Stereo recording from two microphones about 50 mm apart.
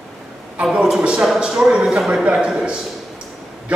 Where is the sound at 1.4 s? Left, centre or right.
Centre.